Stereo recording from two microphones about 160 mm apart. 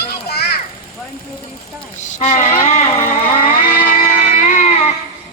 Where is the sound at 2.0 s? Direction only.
45° left (ahead or behind).